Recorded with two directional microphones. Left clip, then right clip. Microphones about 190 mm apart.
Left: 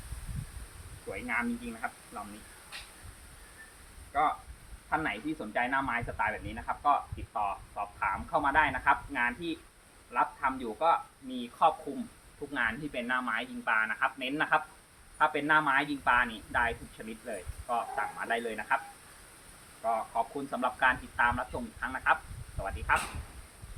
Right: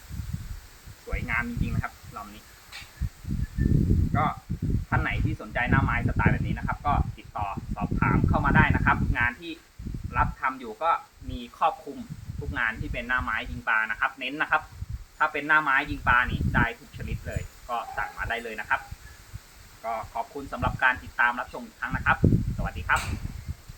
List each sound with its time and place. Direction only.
1.1 s speech: 5° right (ahead or behind)
4.1 s speech: centre (ahead or behind)
19.8 s speech: 5° left (ahead or behind)